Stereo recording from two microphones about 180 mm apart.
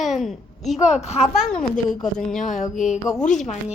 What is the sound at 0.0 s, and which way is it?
A woman's voice, centre (ahead or behind).